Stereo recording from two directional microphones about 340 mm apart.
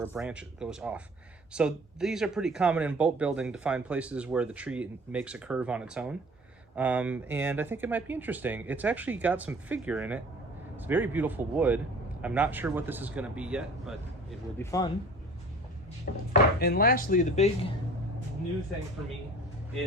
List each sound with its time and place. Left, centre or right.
0.0 s speech: centre
16.3 s chopping: left